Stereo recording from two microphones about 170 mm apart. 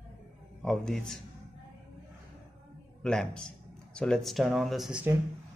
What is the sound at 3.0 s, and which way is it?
Speech, 5° left (ahead or behind).